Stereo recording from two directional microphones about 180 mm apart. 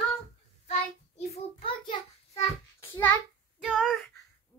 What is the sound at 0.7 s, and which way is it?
Child singing, 35° left (ahead or behind).